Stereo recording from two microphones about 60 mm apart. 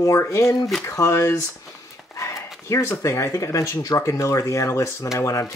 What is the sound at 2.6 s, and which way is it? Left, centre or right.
Speech, left.